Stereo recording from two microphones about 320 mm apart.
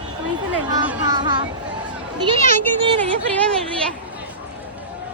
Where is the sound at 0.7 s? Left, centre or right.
Centre.